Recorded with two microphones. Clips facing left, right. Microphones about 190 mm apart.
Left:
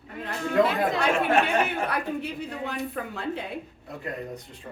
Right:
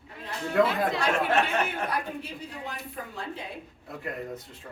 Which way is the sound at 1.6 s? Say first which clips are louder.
Left 3 dB; 60° left (ahead or behind).